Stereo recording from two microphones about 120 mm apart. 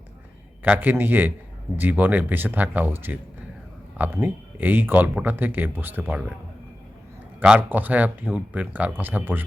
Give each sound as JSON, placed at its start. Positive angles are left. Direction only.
{"t": 0.6, "sound": "speech", "side_deg": -15}
{"t": 7.3, "sound": "speech", "side_deg": -10}